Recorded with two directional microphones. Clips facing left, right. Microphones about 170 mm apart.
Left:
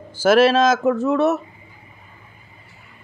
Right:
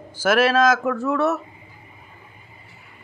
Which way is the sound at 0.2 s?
30° left (ahead or behind).